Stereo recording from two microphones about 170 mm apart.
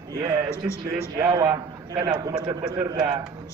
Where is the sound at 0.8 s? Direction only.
20° right (ahead or behind).